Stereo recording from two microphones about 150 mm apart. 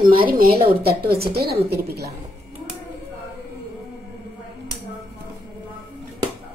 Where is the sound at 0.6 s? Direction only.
90° right.